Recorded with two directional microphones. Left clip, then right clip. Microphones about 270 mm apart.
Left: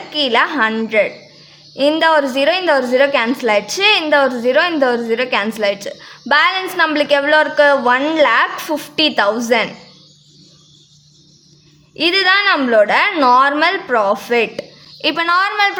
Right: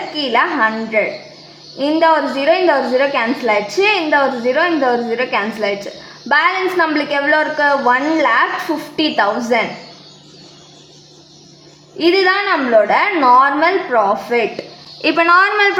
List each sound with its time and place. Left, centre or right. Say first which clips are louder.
0.2 s a woman's voice: left 1 dB; left
12.0 s a woman's voice: left 1 dB; left
15.0 s a woman's voice: right 3 dB; left